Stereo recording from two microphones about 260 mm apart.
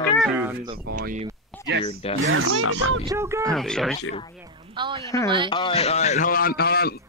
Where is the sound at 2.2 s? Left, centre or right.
Right.